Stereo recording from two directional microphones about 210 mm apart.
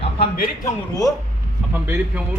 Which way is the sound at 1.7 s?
10° right (ahead or behind).